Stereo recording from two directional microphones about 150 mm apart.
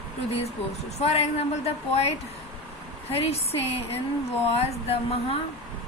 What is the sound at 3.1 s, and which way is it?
A woman's voice, 40° left (ahead or behind).